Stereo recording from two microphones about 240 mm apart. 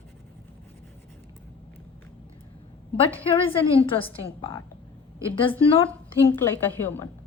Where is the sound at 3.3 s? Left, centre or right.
Left.